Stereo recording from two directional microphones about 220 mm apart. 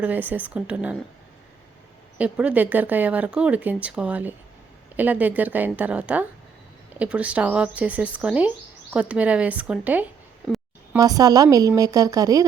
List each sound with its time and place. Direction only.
0.0 s speech: 10° right (ahead or behind)
2.1 s speech: 5° right (ahead or behind)